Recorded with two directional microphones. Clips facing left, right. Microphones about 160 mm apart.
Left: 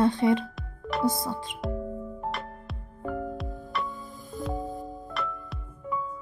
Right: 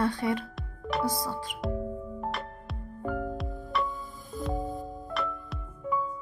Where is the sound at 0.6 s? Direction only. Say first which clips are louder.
Even; centre (ahead or behind).